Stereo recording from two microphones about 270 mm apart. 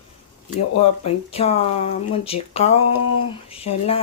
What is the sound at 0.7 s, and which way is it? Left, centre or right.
Speech, left.